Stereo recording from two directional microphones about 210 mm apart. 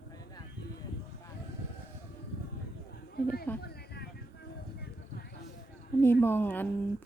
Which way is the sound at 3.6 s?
50° left (ahead or behind).